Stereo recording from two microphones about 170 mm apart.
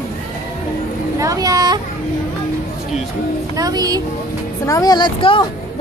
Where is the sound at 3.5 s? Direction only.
20° right (ahead or behind).